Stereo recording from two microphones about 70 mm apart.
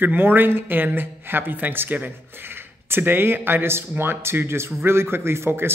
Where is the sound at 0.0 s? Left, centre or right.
Right.